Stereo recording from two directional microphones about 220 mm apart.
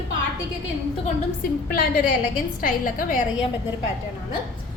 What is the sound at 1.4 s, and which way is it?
A woman's voice, 40° left (ahead or behind).